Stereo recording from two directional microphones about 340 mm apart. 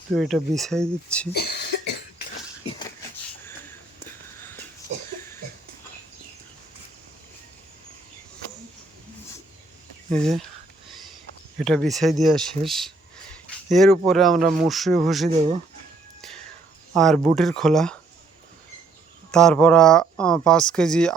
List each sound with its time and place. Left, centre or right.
0.2 s speech: centre
1.3 s cough: left
10.1 s speech: centre
11.6 s speech: centre
16.9 s speech: centre
19.3 s speech: centre